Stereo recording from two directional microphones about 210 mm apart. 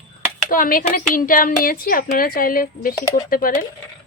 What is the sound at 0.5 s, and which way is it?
A woman's voice, 40° left (ahead or behind).